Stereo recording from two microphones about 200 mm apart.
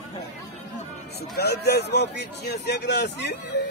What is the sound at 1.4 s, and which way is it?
Speech, 55° left (ahead or behind).